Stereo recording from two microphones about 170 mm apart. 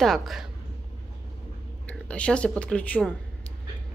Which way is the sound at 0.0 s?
Centre (ahead or behind).